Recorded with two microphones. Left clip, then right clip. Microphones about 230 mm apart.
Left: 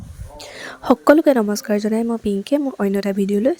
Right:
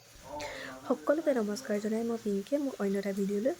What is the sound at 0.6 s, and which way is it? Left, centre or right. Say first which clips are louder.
Speech: left 18 dB; left.